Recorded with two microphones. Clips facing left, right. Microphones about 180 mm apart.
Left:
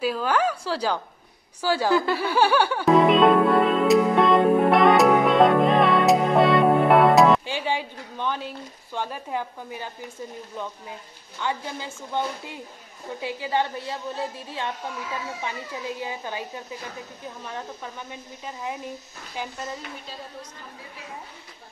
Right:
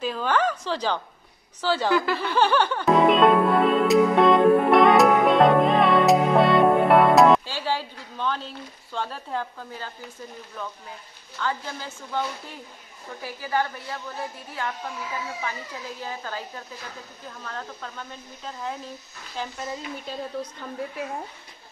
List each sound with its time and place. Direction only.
0.0 s a woman's voice: 5° left (ahead or behind)
2.1 s music: 10° left (ahead or behind)
7.4 s a woman's voice: 15° left (ahead or behind)
11.3 s a woman's voice: 20° left (ahead or behind)
16.0 s a woman's voice: 15° left (ahead or behind)